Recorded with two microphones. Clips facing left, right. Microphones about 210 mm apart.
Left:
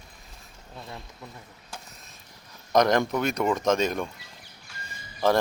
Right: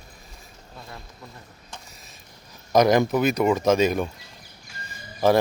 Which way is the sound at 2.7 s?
5° right (ahead or behind).